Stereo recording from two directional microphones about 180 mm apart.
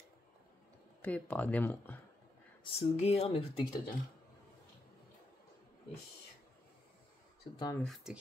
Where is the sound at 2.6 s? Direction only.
35° left (ahead or behind).